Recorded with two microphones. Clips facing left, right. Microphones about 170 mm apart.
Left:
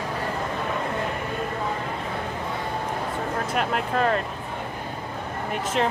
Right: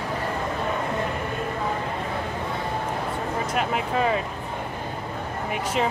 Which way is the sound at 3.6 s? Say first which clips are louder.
Even; 5° right (ahead or behind).